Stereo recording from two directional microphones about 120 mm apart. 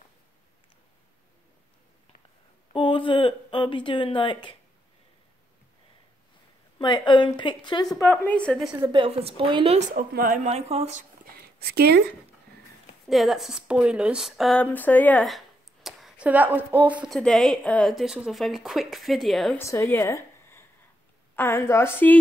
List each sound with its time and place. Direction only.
2.7 s speech: 45° left (ahead or behind)
6.8 s a woman's voice: 40° left (ahead or behind)
7.9 s a woman's voice: 20° left (ahead or behind); by 8.7 s 5° left (ahead or behind)
8.9 s a woman's voice: 50° right (ahead or behind)
9.8 s speech: 80° right
13.1 s speech: centre (ahead or behind)
14.5 s a woman's voice: 15° left (ahead or behind)
15.2 s a sound: centre (ahead or behind)
16.3 s speech: 15° right (ahead or behind)
17.1 s speech: 5° left (ahead or behind)
19.6 s a woman's voice: 20° left (ahead or behind)